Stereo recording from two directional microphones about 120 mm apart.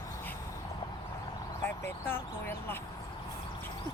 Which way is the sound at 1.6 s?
20° left (ahead or behind).